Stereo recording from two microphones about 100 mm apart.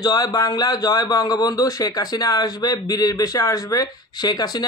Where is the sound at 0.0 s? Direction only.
40° left (ahead or behind).